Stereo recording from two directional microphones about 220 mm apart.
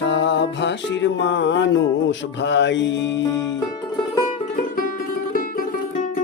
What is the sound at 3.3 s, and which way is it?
Music, 15° left (ahead or behind).